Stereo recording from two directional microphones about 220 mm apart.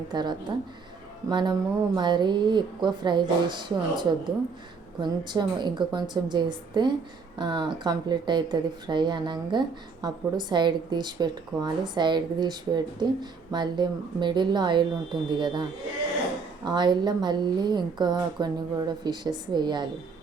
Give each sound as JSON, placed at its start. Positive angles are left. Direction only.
{"t": 0.1, "sound": "speech", "side_deg": -20}
{"t": 16.6, "sound": "speech", "side_deg": -20}